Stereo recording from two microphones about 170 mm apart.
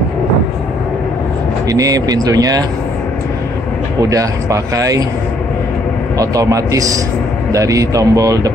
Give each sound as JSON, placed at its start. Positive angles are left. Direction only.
{"t": 1.7, "sound": "speech", "side_deg": -20}
{"t": 4.0, "sound": "speech", "side_deg": -20}
{"t": 6.1, "sound": "speech", "side_deg": -20}